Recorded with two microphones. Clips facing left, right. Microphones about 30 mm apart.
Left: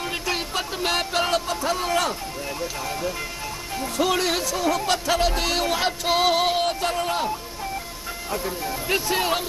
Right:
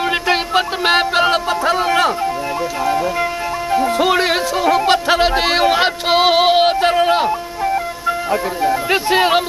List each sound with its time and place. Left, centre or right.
0.1 s music: right
3.7 s music: right
8.3 s speech: right